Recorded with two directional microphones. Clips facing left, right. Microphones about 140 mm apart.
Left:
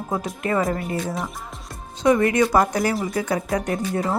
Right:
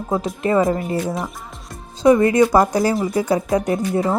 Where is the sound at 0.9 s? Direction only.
Centre (ahead or behind).